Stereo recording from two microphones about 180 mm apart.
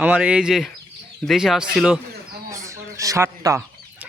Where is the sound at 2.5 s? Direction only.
15° right (ahead or behind).